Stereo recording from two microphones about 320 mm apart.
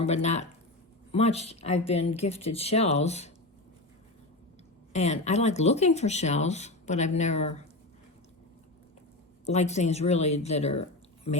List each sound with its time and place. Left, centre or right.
0.0 s speech: left
4.9 s speech: left
9.5 s speech: left